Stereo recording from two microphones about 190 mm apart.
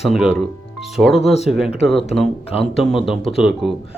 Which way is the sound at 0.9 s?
Centre (ahead or behind).